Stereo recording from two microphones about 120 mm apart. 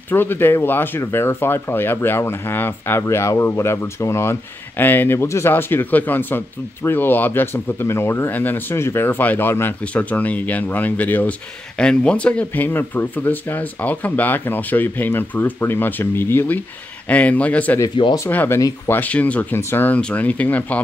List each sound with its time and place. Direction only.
0.1 s speech: 15° left (ahead or behind)
17.9 s speech: 40° left (ahead or behind)
18.3 s speech: 15° left (ahead or behind)